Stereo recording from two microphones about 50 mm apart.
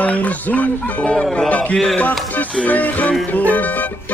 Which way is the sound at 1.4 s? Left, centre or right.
Left.